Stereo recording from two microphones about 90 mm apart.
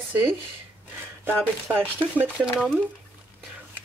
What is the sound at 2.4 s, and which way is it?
Speech, 5° right (ahead or behind).